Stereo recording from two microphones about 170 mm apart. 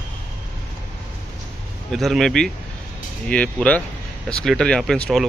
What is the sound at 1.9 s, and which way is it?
Speech, centre (ahead or behind).